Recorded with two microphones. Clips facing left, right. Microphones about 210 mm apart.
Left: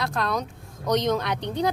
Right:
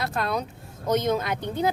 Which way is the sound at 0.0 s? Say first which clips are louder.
Even; 5° right (ahead or behind).